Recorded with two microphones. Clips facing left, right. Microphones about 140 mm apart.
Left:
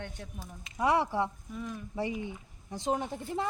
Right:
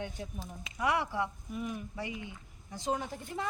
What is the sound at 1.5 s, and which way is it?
Speech, 10° right (ahead or behind).